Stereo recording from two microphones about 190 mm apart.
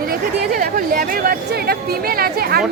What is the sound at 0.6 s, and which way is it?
Speech, 45° right (ahead or behind).